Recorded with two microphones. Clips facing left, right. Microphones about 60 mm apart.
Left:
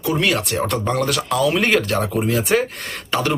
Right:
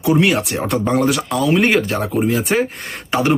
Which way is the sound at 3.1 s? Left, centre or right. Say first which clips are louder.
Right 4 dB; centre.